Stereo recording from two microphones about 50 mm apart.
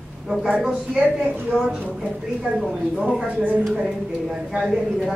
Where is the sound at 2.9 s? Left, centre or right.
Centre.